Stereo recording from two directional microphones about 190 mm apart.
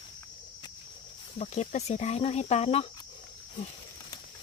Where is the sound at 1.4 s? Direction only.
35° left (ahead or behind).